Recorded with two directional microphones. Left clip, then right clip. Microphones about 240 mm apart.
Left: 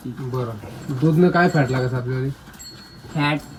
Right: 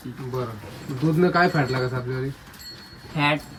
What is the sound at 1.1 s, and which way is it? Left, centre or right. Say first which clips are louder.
Speech: left 2 dB; centre.